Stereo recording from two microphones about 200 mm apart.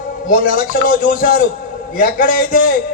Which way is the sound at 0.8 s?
45° left (ahead or behind).